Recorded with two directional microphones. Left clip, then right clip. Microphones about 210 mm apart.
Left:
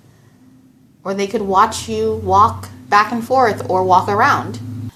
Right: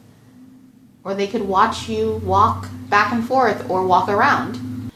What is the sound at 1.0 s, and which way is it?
A woman's voice, 20° left (ahead or behind).